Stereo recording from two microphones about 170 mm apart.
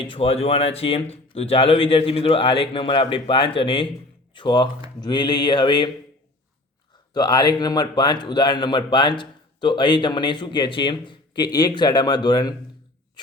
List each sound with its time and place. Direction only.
0.0 s a man's voice: 35° left (ahead or behind)
7.1 s a man's voice: 25° left (ahead or behind)